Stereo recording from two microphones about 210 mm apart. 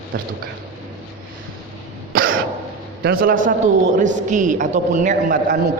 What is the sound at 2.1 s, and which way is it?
Throat clearing, 45° right (ahead or behind).